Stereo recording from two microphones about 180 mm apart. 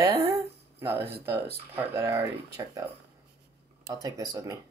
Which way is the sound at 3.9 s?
20° right (ahead or behind).